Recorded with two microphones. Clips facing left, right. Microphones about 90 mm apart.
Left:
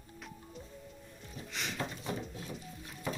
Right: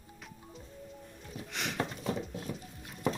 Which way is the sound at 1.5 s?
60° right (ahead or behind).